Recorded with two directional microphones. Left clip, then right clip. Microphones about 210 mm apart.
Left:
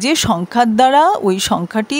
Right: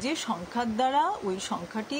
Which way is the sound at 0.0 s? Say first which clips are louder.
Left 15 dB; 50° left (ahead or behind).